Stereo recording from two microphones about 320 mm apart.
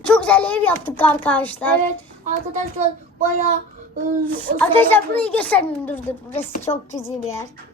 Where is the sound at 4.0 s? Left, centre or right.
Right.